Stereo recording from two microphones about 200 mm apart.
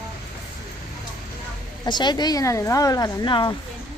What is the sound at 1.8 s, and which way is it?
Speech, 20° left (ahead or behind).